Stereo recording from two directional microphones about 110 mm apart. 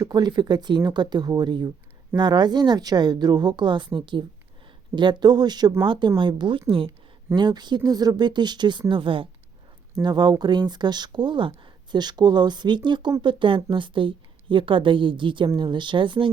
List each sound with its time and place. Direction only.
0.0 s a woman's voice: 40° right (ahead or behind)
7.3 s a woman's voice: 40° right (ahead or behind)
10.0 s a woman's voice: 40° right (ahead or behind)